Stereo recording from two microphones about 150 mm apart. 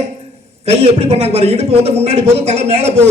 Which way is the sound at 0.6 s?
45° right (ahead or behind).